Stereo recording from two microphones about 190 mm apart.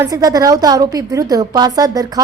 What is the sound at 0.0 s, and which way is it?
A woman's voice, 20° right (ahead or behind).